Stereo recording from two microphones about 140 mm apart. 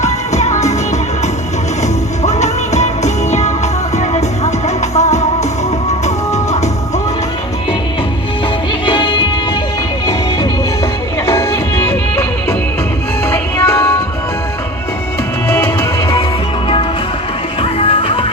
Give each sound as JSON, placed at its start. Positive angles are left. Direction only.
{"t": 0.0, "sound": "music", "side_deg": 55}
{"t": 2.2, "sound": "music", "side_deg": 55}
{"t": 8.9, "sound": "music", "side_deg": 35}
{"t": 11.3, "sound": "music", "side_deg": 20}
{"t": 15.5, "sound": "music", "side_deg": 20}
{"t": 17.6, "sound": "music", "side_deg": 45}